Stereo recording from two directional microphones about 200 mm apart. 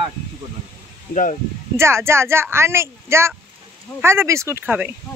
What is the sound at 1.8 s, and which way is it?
Speech, 15° right (ahead or behind).